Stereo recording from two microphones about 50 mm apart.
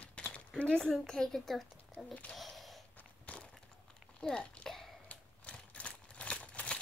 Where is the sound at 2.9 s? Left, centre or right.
Left.